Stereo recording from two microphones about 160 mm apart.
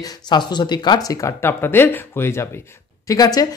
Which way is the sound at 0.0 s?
25° left (ahead or behind).